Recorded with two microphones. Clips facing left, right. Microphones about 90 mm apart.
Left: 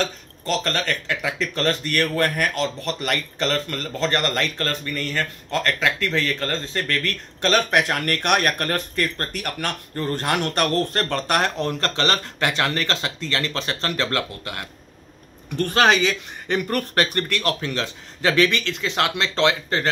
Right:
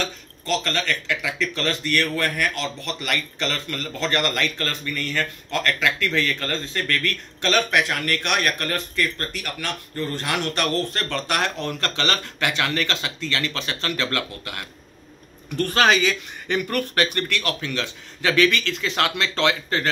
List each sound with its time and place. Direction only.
0.0 s a man's voice: 40° left (ahead or behind)